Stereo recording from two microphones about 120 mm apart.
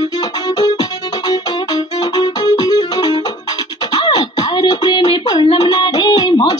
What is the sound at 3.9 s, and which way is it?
Beatboxing, 35° left (ahead or behind).